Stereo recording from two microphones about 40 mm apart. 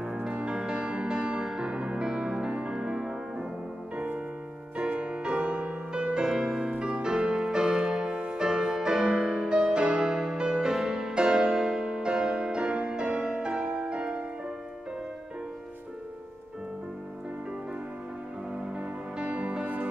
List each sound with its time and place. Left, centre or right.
0.0 s music: centre
4.7 s music: right
18.8 s music: right